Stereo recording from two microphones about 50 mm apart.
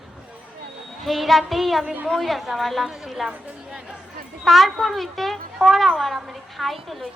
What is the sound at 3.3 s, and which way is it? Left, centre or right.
Speech, centre.